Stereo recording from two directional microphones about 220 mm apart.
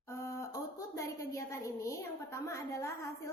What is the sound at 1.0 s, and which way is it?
A woman's voice, 15° left (ahead or behind).